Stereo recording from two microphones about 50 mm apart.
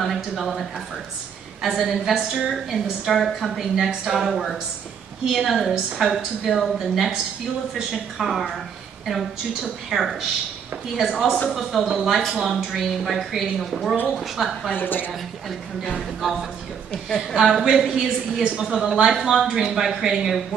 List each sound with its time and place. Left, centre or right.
0.0 s a woman's voice: centre
11.9 s a woman's voice: centre
14.8 s a woman's voice: left
16.0 s a woman's voice: centre
16.9 s a woman's voice: centre
17.7 s speech: centre